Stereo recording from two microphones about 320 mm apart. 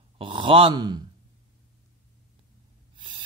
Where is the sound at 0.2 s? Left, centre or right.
Centre.